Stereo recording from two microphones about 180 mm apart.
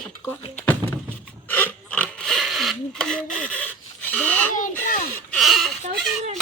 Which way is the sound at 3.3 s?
5° left (ahead or behind).